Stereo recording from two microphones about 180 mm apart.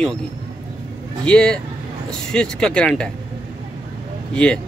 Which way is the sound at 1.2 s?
5° left (ahead or behind).